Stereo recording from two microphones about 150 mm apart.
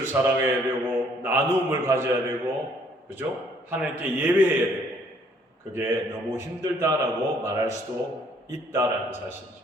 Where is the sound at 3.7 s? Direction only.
10° right (ahead or behind).